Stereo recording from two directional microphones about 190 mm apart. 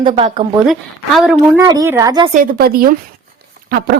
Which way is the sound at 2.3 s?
50° right (ahead or behind).